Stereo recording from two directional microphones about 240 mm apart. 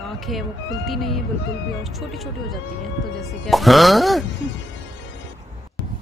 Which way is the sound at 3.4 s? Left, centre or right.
Centre.